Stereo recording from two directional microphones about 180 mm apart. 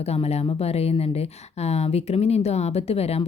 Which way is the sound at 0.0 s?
35° left (ahead or behind).